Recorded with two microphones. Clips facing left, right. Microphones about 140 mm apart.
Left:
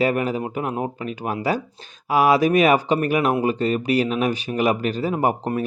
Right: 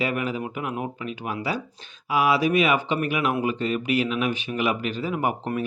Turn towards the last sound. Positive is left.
turn(degrees=40)  # may be behind; listen again after turning